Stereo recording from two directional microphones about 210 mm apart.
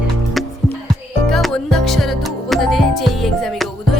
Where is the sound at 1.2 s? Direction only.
Centre (ahead or behind).